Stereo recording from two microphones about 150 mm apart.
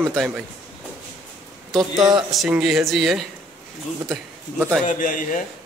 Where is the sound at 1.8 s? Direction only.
25° right (ahead or behind).